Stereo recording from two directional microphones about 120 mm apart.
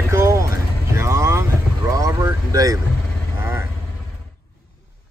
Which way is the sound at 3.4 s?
20° right (ahead or behind).